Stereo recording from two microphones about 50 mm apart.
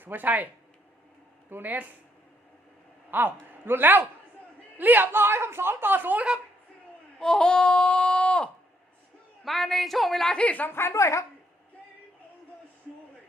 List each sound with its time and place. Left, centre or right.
0.0 s speech: right
1.5 s speech: right
3.1 s a man's voice: right
7.2 s speech: centre
9.4 s a woman's voice: centre
10.3 s a woman's voice: left
10.7 s a woman's voice: left